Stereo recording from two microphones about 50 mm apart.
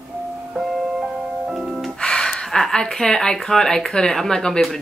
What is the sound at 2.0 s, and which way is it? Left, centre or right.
Speech, centre.